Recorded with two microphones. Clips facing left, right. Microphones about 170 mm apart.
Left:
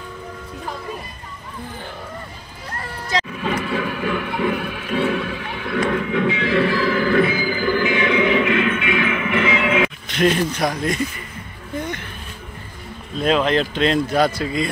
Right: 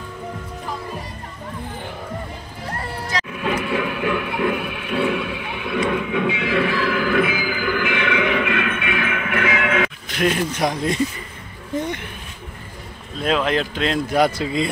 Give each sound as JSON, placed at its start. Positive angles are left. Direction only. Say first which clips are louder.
{"t": 3.3, "sound": "music", "louder": "even", "side_deg": -5}
{"t": 3.6, "sound": "a sound", "louder": "right 1 dB", "side_deg": -5}
{"t": 7.9, "sound": "music", "louder": "left 3 dB", "side_deg": -60}
{"t": 9.5, "sound": "music", "louder": "left 2 dB", "side_deg": 0}
{"t": 10.5, "sound": "speech", "louder": "even", "side_deg": -20}
{"t": 13.2, "sound": "speech", "louder": "left 2 dB", "side_deg": 0}
{"t": 14.2, "sound": "speech", "louder": "even", "side_deg": -20}